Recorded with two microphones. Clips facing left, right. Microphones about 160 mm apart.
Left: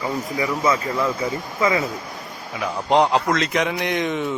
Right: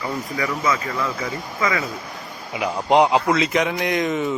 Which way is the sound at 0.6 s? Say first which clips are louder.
Left 4 dB; 30° left (ahead or behind).